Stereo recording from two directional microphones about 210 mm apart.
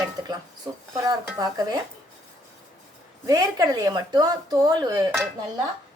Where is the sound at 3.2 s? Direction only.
15° right (ahead or behind).